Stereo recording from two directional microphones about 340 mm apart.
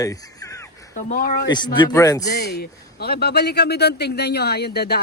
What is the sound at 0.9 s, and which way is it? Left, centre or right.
Speech, left.